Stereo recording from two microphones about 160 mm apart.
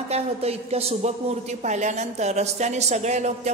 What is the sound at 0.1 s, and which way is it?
A woman's voice, 40° right (ahead or behind).